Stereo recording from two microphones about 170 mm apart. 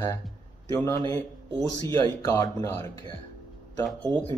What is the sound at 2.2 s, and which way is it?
Speech, 20° left (ahead or behind).